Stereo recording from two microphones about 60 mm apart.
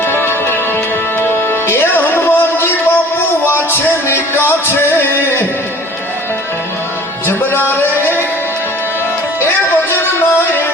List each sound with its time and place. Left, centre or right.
0.1 s music: left